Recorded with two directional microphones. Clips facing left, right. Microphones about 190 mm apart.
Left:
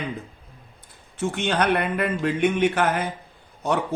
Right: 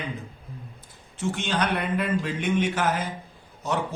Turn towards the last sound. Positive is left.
turn(degrees=60)  # may be behind; listen again after turning